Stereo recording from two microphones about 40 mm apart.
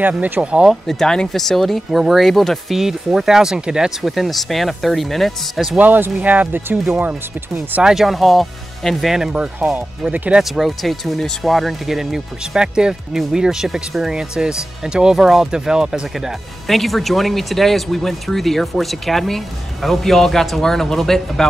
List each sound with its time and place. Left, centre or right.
0.4 s speech: right
0.8 s speech: centre
1.9 s speech: centre
2.7 s speech: centre
4.0 s speech: centre
5.8 s speech: right
7.8 s speech: centre
9.8 s speech: right
10.5 s speech: centre
11.1 s speech: centre
11.5 s speech: centre
12.5 s speech: centre
16.6 s speech: centre